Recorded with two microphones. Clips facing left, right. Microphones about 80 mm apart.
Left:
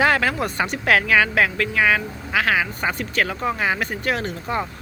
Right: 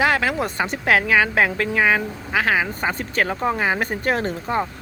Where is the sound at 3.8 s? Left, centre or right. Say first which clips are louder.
Right 2 dB; right.